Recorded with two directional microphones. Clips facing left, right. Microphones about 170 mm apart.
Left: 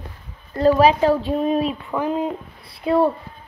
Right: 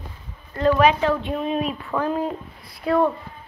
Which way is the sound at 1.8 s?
15° left (ahead or behind).